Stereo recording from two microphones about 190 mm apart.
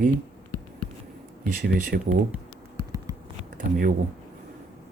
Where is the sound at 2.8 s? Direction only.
15° right (ahead or behind).